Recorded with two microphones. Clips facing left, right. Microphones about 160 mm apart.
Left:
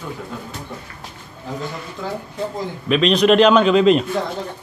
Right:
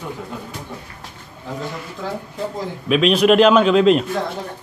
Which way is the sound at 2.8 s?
5° right (ahead or behind).